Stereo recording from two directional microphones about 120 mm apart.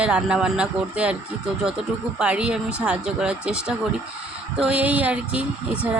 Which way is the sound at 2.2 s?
10° right (ahead or behind).